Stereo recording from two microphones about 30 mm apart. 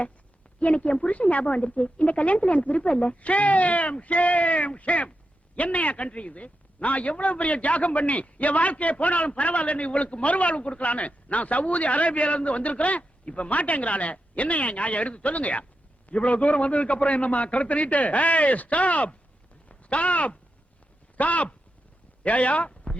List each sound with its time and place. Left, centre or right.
0.6 s a man's voice: left
1.5 s a man's voice: left
22.7 s a sound: left